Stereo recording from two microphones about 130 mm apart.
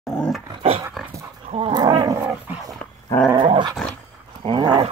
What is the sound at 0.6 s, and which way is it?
Dog, 45° right (ahead or behind).